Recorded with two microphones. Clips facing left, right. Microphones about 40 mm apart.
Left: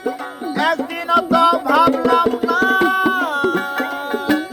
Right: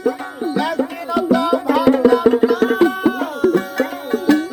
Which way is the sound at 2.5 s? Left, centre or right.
Left.